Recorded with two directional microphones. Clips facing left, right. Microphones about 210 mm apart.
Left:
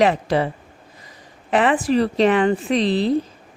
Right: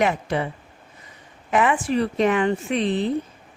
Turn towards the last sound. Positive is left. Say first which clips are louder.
# left 4 dB
turn(degrees=35)  # may be behind; listen again after turning